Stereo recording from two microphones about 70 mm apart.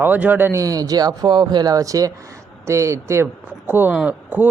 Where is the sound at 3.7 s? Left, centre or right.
Right.